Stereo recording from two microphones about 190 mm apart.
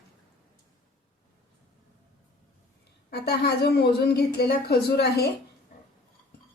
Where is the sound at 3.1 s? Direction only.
60° left (ahead or behind).